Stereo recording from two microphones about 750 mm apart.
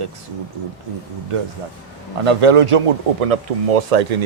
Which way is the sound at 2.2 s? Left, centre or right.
Right.